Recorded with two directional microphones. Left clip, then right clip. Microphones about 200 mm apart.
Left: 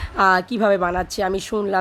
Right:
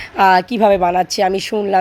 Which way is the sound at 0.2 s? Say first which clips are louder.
Right 5 dB; 5° right (ahead or behind).